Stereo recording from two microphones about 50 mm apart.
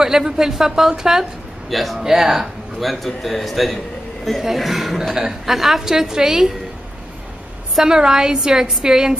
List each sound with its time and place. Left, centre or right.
0.0 s a woman's voice: centre
1.7 s a woman's voice: centre
7.7 s a woman's voice: centre